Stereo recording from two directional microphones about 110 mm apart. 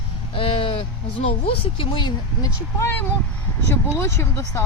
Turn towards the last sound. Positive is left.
turn(degrees=20)  # may be behind; listen again after turning